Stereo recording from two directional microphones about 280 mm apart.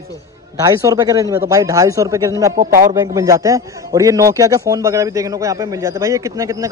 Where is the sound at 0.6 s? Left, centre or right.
Centre.